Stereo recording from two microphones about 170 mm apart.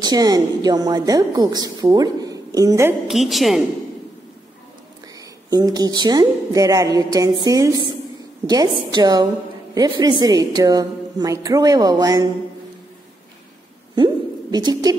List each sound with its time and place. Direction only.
0.0 s a woman's voice: 20° right (ahead or behind)
3.1 s a woman's voice: centre (ahead or behind)
5.5 s a woman's voice: 20° right (ahead or behind)
13.9 s a sound: 25° right (ahead or behind)